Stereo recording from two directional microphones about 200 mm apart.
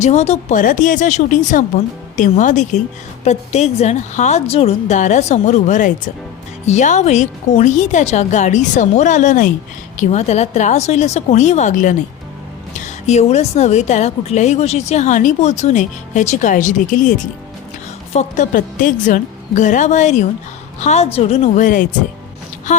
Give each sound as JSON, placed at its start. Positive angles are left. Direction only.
{"t": 0.0, "sound": "a woman's voice", "side_deg": 35}